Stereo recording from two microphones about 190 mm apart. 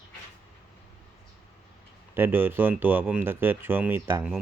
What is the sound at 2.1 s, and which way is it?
Speech, 10° right (ahead or behind).